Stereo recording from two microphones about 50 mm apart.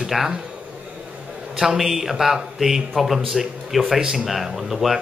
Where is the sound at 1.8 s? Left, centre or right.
Centre.